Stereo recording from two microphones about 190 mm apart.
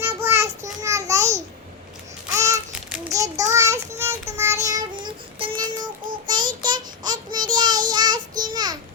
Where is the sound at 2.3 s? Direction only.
15° right (ahead or behind).